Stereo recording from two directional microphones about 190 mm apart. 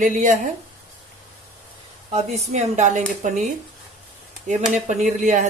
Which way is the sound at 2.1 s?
40° right (ahead or behind).